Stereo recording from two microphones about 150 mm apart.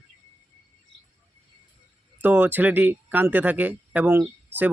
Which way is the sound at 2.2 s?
10° right (ahead or behind).